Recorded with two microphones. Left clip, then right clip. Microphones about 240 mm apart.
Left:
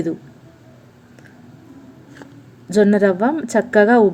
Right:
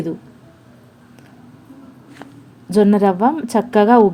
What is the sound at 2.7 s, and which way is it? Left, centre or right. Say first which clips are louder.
A woman's voice: even; centre.